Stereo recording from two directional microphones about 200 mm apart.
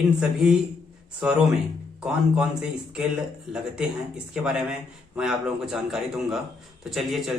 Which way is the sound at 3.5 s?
5° right (ahead or behind).